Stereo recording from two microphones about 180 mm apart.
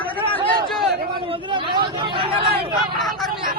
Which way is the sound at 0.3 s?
Centre (ahead or behind).